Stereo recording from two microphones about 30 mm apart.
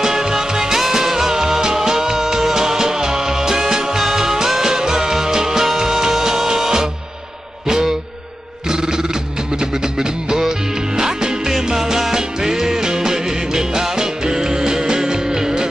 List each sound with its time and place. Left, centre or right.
0.0 s music: centre
8.6 s a sound: right
9.6 s music: right